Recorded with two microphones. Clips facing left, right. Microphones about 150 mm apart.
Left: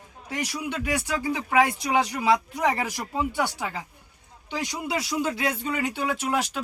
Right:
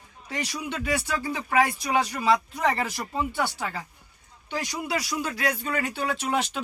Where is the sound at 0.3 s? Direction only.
10° left (ahead or behind).